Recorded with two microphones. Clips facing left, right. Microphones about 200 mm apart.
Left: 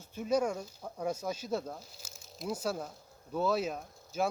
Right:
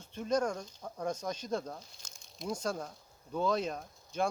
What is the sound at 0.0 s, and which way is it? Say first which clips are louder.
Speech: left 1 dB; 5° left (ahead or behind).